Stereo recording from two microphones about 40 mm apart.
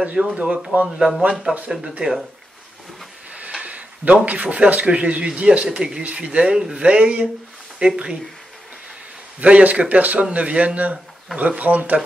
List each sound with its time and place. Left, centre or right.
0.0 s speech: right
0.8 s speech: centre
3.6 s a sound: right
4.3 s speech: right
5.7 s speech: centre
9.4 s speech: right